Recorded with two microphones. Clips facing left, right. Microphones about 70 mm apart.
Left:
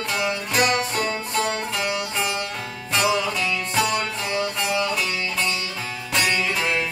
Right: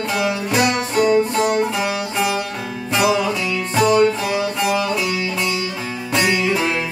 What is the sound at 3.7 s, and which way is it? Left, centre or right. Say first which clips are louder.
Music: right 11 dB; centre.